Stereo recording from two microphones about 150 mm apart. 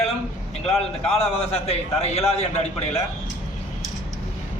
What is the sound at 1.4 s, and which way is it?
A man's voice, 45° left (ahead or behind).